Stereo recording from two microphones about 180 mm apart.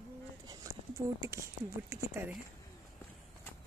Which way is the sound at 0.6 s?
20° right (ahead or behind).